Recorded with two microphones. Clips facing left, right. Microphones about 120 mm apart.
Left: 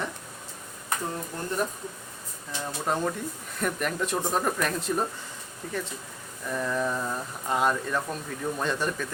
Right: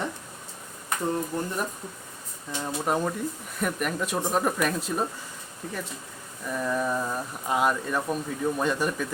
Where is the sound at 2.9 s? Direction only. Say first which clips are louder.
Right 1 dB; 10° right (ahead or behind).